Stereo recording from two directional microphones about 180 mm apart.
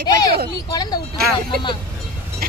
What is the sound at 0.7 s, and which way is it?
Speech, 20° left (ahead or behind).